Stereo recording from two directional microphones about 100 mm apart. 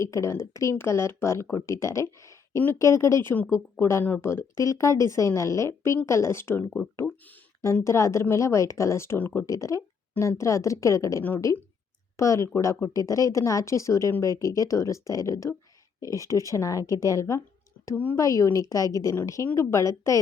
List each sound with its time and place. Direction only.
0.0 s speech: 30° left (ahead or behind)
7.9 s speech: 30° left (ahead or behind)
9.5 s speech: 30° left (ahead or behind)
17.9 s speech: 20° left (ahead or behind)
18.2 s speech: 35° left (ahead or behind)